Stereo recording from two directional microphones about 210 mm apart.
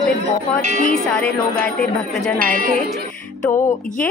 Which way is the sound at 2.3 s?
40° right (ahead or behind).